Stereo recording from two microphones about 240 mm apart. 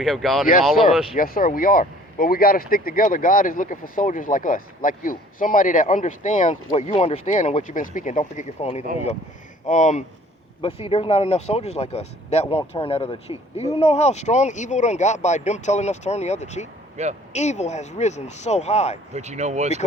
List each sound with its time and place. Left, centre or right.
0.0 s speech: centre
1.1 s speech: left
17.0 s speech: right
17.3 s speech: left
19.1 s speech: right